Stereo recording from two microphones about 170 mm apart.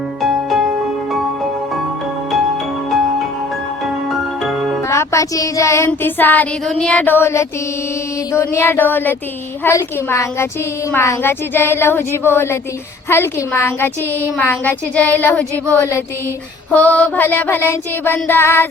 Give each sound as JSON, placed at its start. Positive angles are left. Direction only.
{"t": 0.2, "sound": "music", "side_deg": 0}
{"t": 4.1, "sound": "music", "side_deg": 0}
{"t": 4.9, "sound": "child singing", "side_deg": 20}